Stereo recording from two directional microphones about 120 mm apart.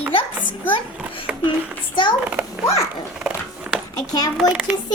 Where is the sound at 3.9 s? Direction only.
30° left (ahead or behind).